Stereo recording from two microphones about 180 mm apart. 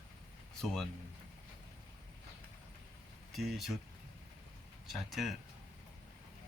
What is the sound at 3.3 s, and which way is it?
Speech, centre (ahead or behind).